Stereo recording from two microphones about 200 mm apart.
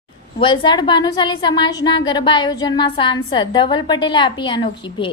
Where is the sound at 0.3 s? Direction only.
25° left (ahead or behind).